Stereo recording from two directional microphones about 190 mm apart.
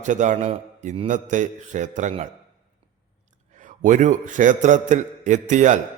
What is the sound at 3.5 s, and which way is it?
A man's voice, 40° right (ahead or behind).